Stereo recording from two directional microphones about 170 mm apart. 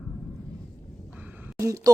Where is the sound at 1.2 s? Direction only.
10° right (ahead or behind).